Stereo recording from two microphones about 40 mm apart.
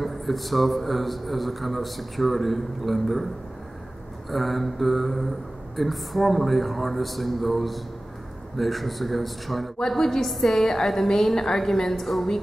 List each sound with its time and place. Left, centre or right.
0.0 s a man's voice: centre
4.3 s a man's voice: centre
9.8 s a woman's voice: centre